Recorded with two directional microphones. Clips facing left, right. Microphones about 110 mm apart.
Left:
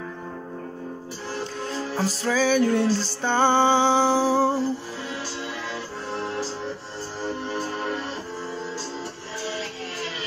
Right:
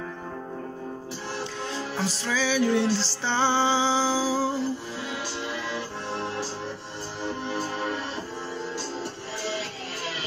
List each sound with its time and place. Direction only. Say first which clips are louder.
2.0 s music: left 5 dB; 45° left (ahead or behind); by 4.6 s 60° left (ahead or behind)